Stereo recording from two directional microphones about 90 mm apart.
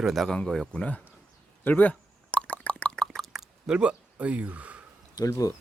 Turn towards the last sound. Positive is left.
turn(degrees=40)  # may be behind; listen again after turning